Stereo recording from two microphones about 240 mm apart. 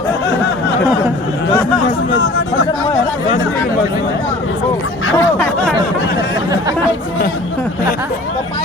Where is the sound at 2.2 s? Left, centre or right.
Left.